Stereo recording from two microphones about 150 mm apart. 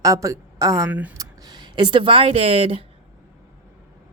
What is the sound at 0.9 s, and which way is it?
Speech, 10° right (ahead or behind).